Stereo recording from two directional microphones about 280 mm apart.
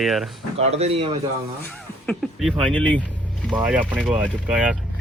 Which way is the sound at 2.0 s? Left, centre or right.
Centre.